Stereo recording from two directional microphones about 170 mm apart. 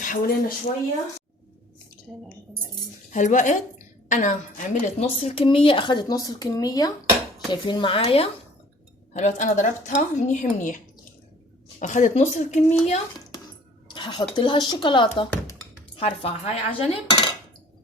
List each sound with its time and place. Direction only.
0.0 s speech: 55° left (ahead or behind)
3.1 s a woman's voice: 45° left (ahead or behind)
9.1 s a woman's voice: 45° left (ahead or behind)
11.8 s a woman's voice: 45° left (ahead or behind)
13.9 s dishes: 30° left (ahead or behind)
14.3 s a woman's voice: 25° left (ahead or behind)